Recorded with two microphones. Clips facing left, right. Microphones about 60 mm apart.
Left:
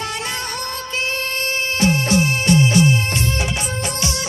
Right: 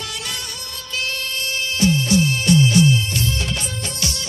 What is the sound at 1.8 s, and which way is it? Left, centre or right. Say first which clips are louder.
Music: even; left.